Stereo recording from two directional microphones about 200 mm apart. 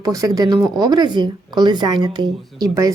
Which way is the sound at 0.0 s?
15° right (ahead or behind).